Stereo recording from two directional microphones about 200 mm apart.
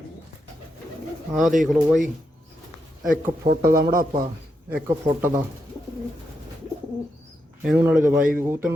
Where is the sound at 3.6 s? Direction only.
15° right (ahead or behind).